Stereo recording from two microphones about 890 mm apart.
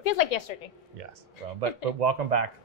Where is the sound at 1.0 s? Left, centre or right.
Right.